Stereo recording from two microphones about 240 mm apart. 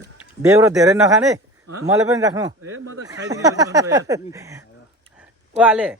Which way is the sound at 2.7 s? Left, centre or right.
Right.